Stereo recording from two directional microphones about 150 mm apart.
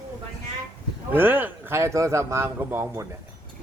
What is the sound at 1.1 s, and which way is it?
Speech, 15° right (ahead or behind).